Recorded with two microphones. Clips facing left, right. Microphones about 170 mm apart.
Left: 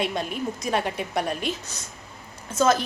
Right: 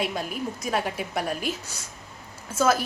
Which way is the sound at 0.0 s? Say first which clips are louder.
Left 2 dB; 5° right (ahead or behind).